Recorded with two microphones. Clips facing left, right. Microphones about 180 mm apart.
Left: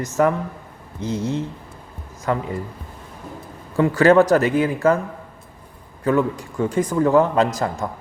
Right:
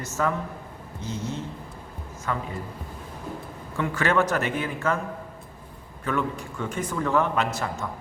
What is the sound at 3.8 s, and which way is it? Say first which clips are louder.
A man's voice: left 10 dB; 40° left (ahead or behind).